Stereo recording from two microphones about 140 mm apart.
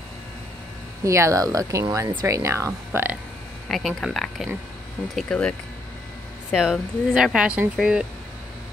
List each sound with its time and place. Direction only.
1.0 s speech: 20° right (ahead or behind)
3.6 s speech: 5° left (ahead or behind)
6.5 s speech: 5° right (ahead or behind)